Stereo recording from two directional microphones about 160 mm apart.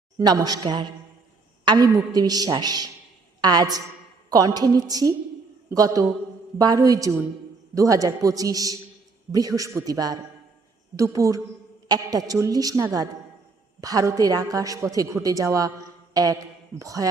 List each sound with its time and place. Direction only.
0.2 s a woman's voice: 25° right (ahead or behind)